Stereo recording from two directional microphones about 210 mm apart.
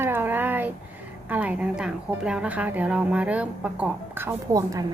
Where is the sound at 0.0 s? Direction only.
10° right (ahead or behind).